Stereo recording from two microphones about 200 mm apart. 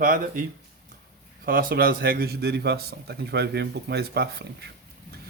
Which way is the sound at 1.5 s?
45° right (ahead or behind).